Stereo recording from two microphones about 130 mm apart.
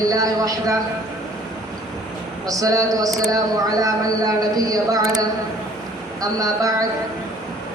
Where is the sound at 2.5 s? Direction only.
25° right (ahead or behind).